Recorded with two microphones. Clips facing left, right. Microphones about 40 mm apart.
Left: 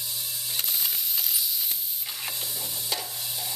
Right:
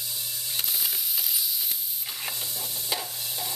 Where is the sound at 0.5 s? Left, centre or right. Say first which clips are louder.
Even; centre.